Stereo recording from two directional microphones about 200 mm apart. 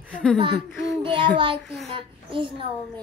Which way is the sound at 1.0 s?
25° right (ahead or behind).